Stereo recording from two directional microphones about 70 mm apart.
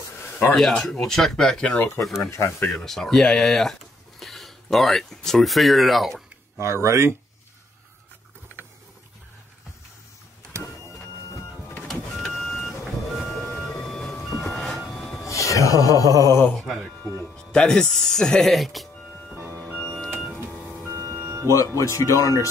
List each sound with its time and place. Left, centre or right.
0.6 s speech: centre
2.0 s speech: centre
6.6 s speech: right
11.9 s vehicle: centre
15.2 s speech: left
16.5 s speech: centre
17.0 s music: left
17.5 s speech: centre
19.3 s music: right
19.6 s music: centre
20.9 s music: right
21.5 s speech: left